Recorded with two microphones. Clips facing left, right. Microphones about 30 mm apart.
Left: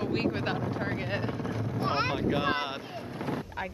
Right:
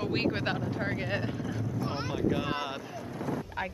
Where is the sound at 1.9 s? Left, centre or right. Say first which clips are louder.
Left 6 dB; left.